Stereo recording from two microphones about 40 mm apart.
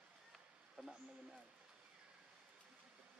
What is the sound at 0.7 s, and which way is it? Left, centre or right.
Speech, centre.